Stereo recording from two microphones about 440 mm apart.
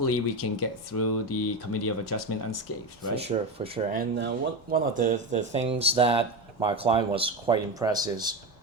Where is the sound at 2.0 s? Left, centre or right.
Left.